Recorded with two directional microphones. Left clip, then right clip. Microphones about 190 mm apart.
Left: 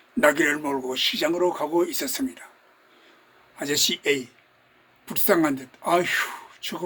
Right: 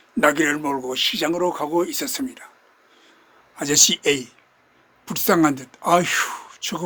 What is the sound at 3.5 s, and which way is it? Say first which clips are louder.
Speech: right 6 dB; 55° right (ahead or behind).